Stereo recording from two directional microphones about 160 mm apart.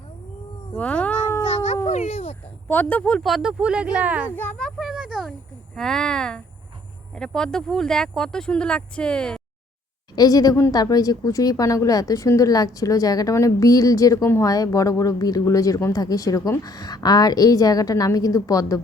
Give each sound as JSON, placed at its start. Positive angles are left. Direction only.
{"t": 0.8, "sound": "cat", "side_deg": 10}
{"t": 1.5, "sound": "a sound", "side_deg": 45}
{"t": 2.6, "sound": "speech", "side_deg": 10}
{"t": 4.4, "sound": "a sound", "side_deg": 5}
{"t": 5.7, "sound": "speech", "side_deg": 5}
{"t": 10.2, "sound": "a woman's voice", "side_deg": 25}